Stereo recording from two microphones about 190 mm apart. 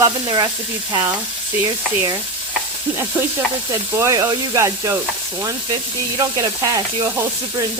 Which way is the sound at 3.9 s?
15° right (ahead or behind).